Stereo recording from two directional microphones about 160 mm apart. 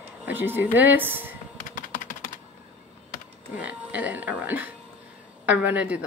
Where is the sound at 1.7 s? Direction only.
55° left (ahead or behind).